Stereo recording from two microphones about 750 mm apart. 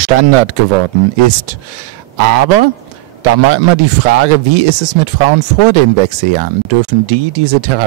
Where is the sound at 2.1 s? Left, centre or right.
Right.